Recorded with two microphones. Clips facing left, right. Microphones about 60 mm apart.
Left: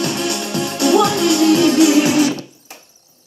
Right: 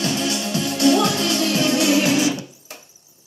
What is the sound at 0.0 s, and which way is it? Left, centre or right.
Music, left.